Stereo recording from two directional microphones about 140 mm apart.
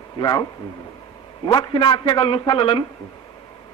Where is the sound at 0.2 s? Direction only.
25° left (ahead or behind).